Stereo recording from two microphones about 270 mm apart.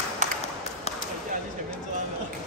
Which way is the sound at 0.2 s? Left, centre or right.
Right.